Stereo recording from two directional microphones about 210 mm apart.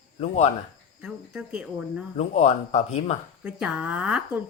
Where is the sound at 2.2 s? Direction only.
35° left (ahead or behind).